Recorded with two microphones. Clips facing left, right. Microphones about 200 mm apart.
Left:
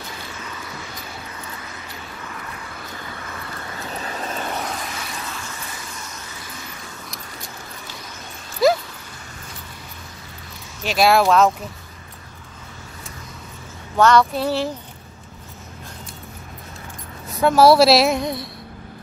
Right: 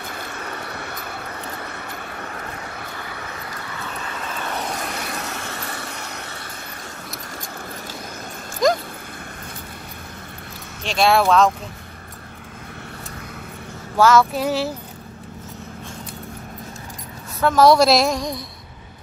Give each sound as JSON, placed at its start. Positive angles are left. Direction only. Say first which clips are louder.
{"t": 0.0, "sound": "vehicle", "louder": "right 3 dB", "side_deg": -55}
{"t": 4.9, "sound": "vehicle", "louder": "right 3 dB", "side_deg": -55}
{"t": 8.6, "sound": "a sound", "louder": "left 2 dB", "side_deg": 5}
{"t": 10.8, "sound": "a woman's voice", "louder": "left 1 dB", "side_deg": 5}
{"t": 13.9, "sound": "speech", "louder": "even", "side_deg": -5}
{"t": 17.4, "sound": "a woman's voice", "louder": "left 1 dB", "side_deg": 10}